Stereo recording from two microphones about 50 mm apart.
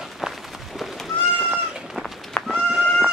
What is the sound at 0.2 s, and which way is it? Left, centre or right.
Run, centre.